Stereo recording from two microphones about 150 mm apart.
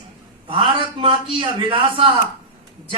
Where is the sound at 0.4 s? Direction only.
35° right (ahead or behind).